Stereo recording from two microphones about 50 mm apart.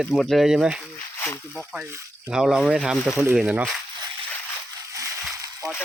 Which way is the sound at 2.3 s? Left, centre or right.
Centre.